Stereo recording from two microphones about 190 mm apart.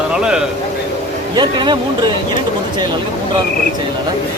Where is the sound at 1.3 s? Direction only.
25° right (ahead or behind).